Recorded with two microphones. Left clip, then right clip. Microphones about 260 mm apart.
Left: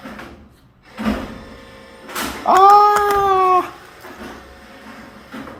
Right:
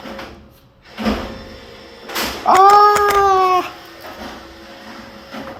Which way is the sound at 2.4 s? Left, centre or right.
Left.